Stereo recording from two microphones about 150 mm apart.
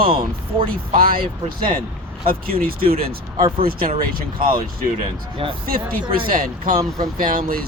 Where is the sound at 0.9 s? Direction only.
75° right (ahead or behind).